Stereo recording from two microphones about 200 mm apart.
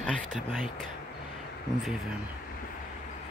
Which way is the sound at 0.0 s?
5° left (ahead or behind).